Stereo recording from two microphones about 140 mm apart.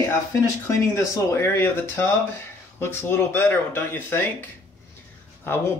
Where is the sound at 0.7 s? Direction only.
20° left (ahead or behind).